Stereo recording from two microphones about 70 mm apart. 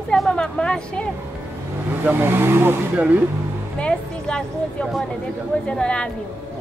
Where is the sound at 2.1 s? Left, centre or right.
Right.